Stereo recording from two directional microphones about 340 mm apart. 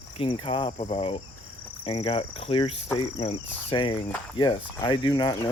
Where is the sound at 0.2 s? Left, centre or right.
Centre.